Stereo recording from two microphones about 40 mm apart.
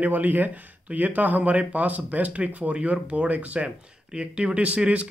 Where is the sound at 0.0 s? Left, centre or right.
Right.